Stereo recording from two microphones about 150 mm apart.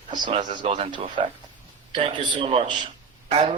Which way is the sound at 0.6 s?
45° right (ahead or behind).